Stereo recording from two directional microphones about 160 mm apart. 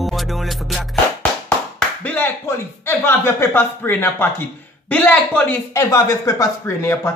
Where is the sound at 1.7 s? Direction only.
10° left (ahead or behind).